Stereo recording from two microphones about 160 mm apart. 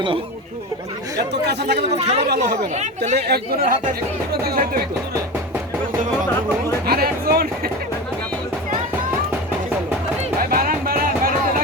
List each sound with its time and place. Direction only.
1.3 s speech: 90° right
2.0 s speech: 40° right (ahead or behind)
3.2 s speech: 85° right
6.8 s speech: 75° right (ahead or behind)
10.5 s music: 65° right (ahead or behind)